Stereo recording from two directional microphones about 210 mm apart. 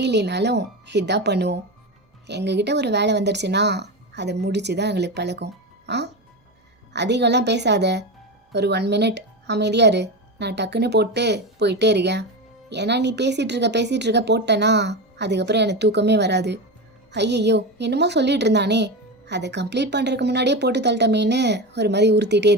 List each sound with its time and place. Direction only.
0.0 s a woman's voice: 55° right (ahead or behind)